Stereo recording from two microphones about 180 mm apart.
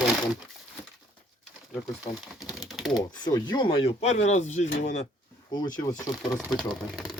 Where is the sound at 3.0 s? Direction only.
25° left (ahead or behind); by 4.7 s 40° left (ahead or behind).